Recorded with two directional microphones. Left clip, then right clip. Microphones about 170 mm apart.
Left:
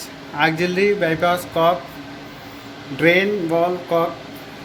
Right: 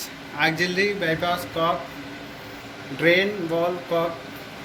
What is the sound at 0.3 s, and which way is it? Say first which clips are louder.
Speech: left 4 dB; 40° left (ahead or behind).